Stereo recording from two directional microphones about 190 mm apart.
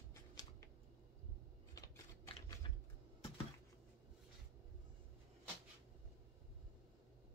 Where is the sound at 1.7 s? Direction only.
20° left (ahead or behind).